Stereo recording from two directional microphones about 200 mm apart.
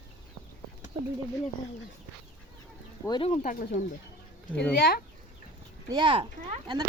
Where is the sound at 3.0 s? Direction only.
20° left (ahead or behind).